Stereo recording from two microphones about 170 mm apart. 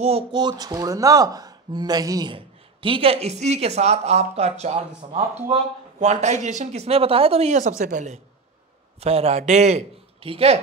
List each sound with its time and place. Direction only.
0.0 s speech: 30° right (ahead or behind)